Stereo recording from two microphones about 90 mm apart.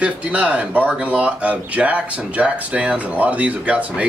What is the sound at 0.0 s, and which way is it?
Speech, 15° right (ahead or behind).